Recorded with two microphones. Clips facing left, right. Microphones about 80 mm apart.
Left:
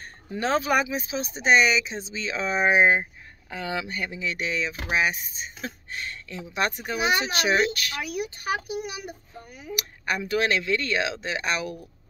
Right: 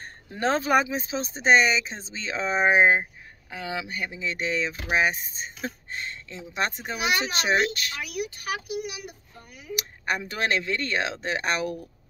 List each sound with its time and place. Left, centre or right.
0.3 s speech: right
3.0 s speech: centre
4.2 s a child's voice: right
8.0 s speech: left
9.8 s speech: right